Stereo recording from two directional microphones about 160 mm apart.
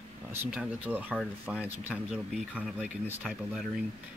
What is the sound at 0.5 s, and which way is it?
Speech, 10° right (ahead or behind).